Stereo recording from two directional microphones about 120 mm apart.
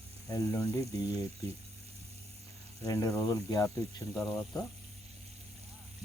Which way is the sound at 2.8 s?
25° left (ahead or behind).